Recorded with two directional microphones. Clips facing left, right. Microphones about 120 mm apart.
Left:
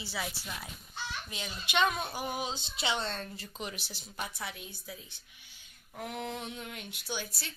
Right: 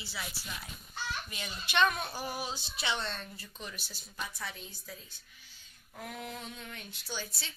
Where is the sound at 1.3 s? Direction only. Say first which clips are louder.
Left 3 dB; 15° left (ahead or behind).